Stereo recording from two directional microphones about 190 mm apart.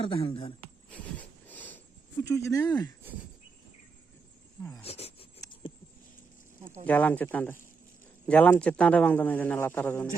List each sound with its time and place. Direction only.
0.0 s speech: 25° left (ahead or behind)
1.5 s a sound: 10° left (ahead or behind)
2.2 s a man's voice: 15° left (ahead or behind)
4.8 s speech: 30° left (ahead or behind)
5.4 s a sound: 25° left (ahead or behind)
6.8 s a man's voice: 10° left (ahead or behind)